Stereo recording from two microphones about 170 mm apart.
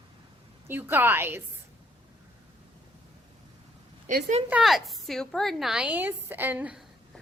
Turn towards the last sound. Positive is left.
turn(degrees=-10)  # may be behind; listen again after turning